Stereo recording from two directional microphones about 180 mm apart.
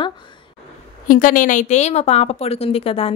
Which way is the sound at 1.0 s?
50° left (ahead or behind).